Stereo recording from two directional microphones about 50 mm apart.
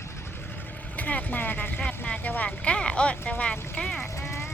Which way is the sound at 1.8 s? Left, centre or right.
Centre.